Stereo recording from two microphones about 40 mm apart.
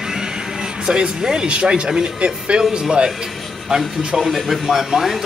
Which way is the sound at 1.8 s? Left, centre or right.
Centre.